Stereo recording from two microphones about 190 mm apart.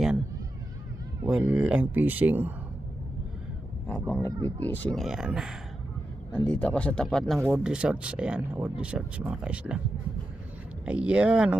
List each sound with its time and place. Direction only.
1.3 s speech: 5° right (ahead or behind)
3.8 s speech: 10° left (ahead or behind)
4.3 s speech: 20° right (ahead or behind)
4.6 s speech: 10° left (ahead or behind)
7.3 s speech: 10° right (ahead or behind)
10.8 s speech: 5° right (ahead or behind)